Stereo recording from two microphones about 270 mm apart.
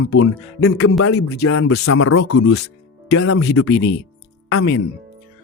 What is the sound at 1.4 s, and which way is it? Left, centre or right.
A man's voice, left.